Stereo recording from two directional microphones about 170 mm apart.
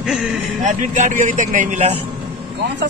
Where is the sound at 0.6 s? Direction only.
45° right (ahead or behind).